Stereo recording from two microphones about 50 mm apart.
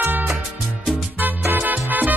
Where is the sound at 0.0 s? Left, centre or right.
Right.